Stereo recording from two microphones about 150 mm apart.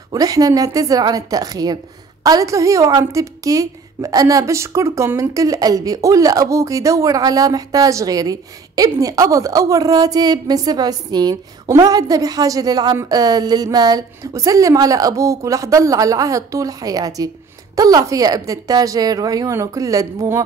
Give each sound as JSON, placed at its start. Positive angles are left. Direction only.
{"t": 0.1, "sound": "a woman's voice", "side_deg": -25}